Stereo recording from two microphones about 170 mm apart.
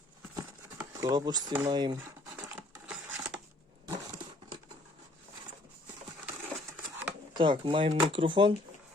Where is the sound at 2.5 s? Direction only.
10° right (ahead or behind).